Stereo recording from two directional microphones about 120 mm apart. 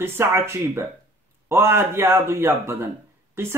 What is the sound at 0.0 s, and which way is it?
Speech, 20° right (ahead or behind).